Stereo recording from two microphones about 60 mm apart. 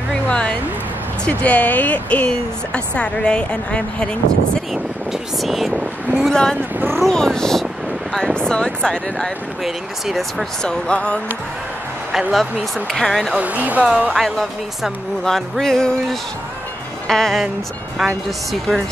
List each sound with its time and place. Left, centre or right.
0.3 s a sound: centre
1.2 s speech: left
5.4 s music: centre
6.3 s speech: centre
10.6 s speech: centre
12.1 s speech: centre
12.9 s music: centre
13.3 s speech: right
14.1 s music: centre
17.1 s speech: centre
17.9 s music: centre